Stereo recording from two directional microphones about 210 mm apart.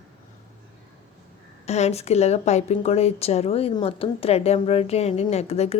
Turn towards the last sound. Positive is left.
turn(degrees=30)  # may be behind; listen again after turning